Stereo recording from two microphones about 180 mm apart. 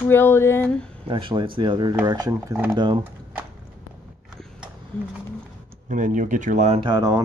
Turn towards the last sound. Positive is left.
turn(degrees=-20)  # may be behind; listen again after turning